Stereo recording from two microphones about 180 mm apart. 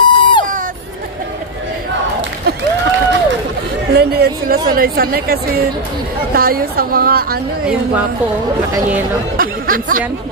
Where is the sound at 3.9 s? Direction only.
60° right (ahead or behind).